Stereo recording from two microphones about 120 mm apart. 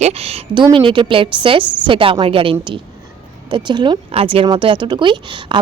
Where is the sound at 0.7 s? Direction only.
45° right (ahead or behind).